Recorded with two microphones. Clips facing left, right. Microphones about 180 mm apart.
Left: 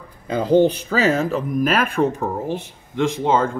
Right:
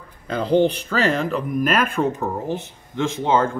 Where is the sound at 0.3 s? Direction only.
10° left (ahead or behind).